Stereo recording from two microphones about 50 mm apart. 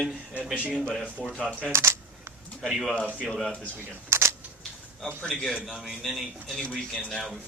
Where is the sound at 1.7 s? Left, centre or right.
Right.